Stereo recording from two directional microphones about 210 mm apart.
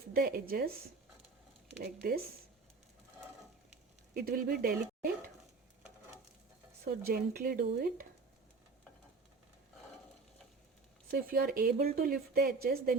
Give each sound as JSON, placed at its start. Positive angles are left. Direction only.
{"t": 0.1, "sound": "speech", "side_deg": -45}
{"t": 1.8, "sound": "speech", "side_deg": -45}
{"t": 4.1, "sound": "speech", "side_deg": -45}
{"t": 7.1, "sound": "speech", "side_deg": -45}
{"t": 11.1, "sound": "speech", "side_deg": -45}